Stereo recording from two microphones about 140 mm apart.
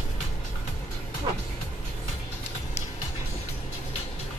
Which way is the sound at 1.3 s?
30° right (ahead or behind).